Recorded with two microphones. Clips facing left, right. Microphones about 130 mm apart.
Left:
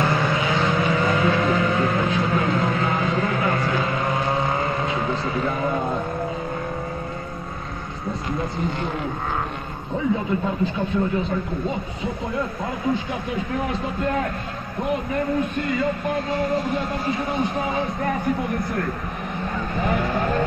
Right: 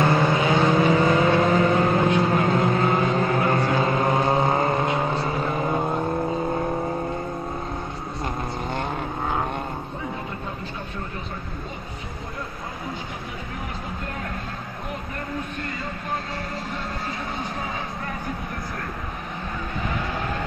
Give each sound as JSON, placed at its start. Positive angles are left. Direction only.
{"t": 0.0, "sound": "vehicle", "side_deg": -25}
{"t": 4.6, "sound": "vehicle", "side_deg": -40}